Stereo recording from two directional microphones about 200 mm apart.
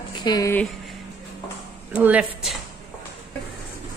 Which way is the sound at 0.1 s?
20° left (ahead or behind).